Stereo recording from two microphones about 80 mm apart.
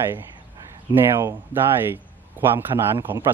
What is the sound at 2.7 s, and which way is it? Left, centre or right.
Speech, right.